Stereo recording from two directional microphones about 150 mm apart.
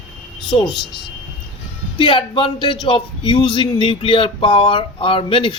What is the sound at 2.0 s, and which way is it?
Speech, 35° left (ahead or behind).